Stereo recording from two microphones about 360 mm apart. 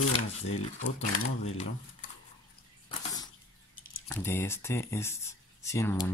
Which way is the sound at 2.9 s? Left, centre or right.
Centre.